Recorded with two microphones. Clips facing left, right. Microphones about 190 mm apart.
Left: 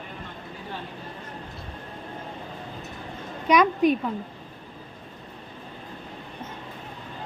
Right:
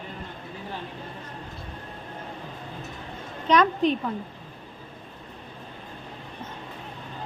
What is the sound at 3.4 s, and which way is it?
Speech, 10° left (ahead or behind).